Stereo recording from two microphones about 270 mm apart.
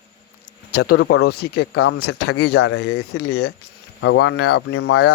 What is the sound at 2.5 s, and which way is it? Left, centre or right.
Speech, left.